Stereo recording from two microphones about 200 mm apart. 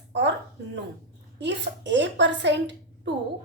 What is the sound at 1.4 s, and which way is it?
A woman's voice, 60° right (ahead or behind).